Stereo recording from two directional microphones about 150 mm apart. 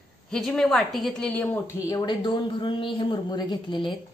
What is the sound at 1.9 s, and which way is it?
A woman's voice, 30° left (ahead or behind).